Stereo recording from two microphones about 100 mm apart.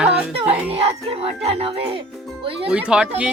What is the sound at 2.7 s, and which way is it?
Speech, 10° right (ahead or behind).